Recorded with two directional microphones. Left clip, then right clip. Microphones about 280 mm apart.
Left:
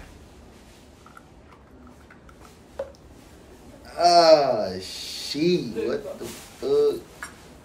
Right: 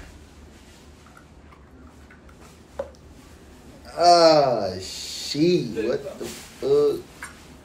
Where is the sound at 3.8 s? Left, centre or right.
Centre.